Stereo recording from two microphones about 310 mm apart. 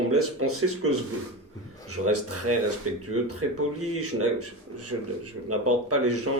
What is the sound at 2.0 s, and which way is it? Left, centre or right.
Speech, right.